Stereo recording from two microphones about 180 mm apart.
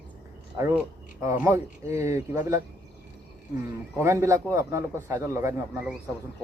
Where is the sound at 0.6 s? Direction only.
15° right (ahead or behind).